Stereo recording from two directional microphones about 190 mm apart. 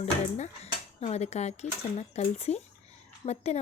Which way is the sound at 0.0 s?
35° left (ahead or behind).